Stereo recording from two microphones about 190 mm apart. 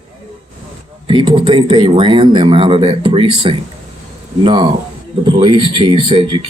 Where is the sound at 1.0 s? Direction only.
25° right (ahead or behind).